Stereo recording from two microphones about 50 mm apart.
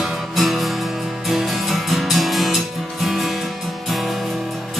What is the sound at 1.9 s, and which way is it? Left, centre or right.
Music, centre.